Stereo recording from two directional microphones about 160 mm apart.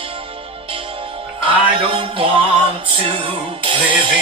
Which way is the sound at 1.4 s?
35° right (ahead or behind).